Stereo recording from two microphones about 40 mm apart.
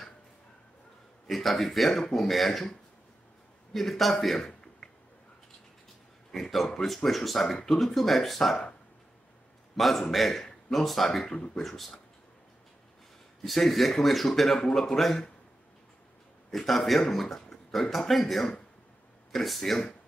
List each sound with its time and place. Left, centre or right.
1.2 s a man's voice: centre
3.7 s a man's voice: centre
6.3 s a man's voice: centre
9.8 s a man's voice: centre
11.2 s speech: left
11.5 s a man's voice: centre
13.4 s a man's voice: centre
16.4 s a man's voice: centre